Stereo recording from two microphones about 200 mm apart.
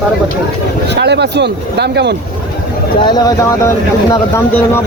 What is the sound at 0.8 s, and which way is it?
Speech, 60° right (ahead or behind).